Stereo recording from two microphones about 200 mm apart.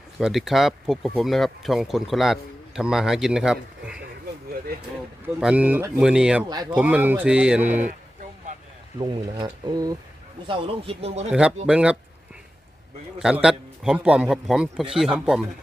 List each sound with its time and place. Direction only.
0.2 s speech: centre (ahead or behind)
4.7 s speech: 50° right (ahead or behind)
5.2 s speech: 5° right (ahead or behind)
6.5 s speech: 20° right (ahead or behind)
6.7 s speech: 10° right (ahead or behind)
7.9 s a sound: 40° right (ahead or behind)
9.0 s speech: 20° right (ahead or behind)
11.3 s speech: 5° right (ahead or behind)
13.4 s speech: 5° right (ahead or behind)